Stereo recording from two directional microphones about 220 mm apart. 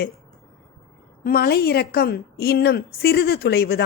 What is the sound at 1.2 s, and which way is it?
A woman's voice, 45° left (ahead or behind).